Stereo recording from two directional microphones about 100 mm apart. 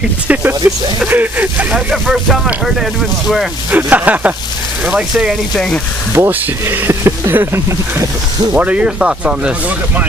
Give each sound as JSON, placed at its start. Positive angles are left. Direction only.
{"t": 0.3, "sound": "speech", "side_deg": -20}
{"t": 1.9, "sound": "speech", "side_deg": -5}
{"t": 3.7, "sound": "speech", "side_deg": -15}
{"t": 6.1, "sound": "speech", "side_deg": -25}
{"t": 8.5, "sound": "speech", "side_deg": -15}